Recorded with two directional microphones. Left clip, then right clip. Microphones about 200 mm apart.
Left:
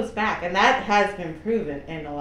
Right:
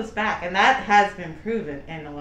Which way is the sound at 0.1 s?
20° right (ahead or behind).